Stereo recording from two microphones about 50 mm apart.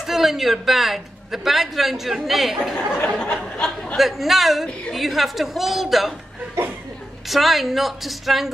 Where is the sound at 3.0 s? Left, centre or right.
Centre.